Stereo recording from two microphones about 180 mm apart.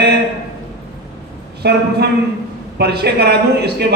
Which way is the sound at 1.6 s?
65° right (ahead or behind).